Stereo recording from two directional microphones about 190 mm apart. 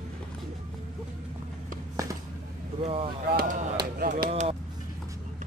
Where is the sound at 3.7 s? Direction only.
50° right (ahead or behind).